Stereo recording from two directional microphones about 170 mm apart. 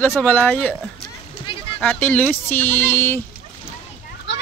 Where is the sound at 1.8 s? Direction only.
10° left (ahead or behind).